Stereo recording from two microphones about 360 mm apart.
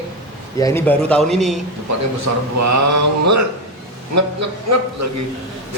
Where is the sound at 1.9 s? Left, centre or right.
Right.